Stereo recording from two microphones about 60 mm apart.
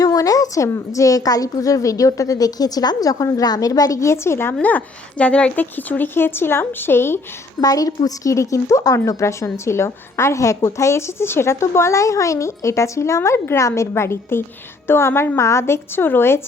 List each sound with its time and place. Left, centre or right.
0.0 s a sound: left
0.9 s a woman's voice: left
4.0 s a woman's voice: left
4.6 s speech: left
5.7 s speech: left
7.6 s a woman's voice: left